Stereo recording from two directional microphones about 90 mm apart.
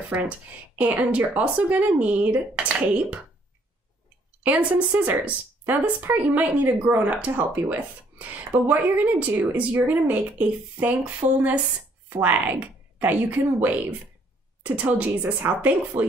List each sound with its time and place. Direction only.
0.7 s speech: 15° right (ahead or behind)
4.4 s speech: 15° right (ahead or behind)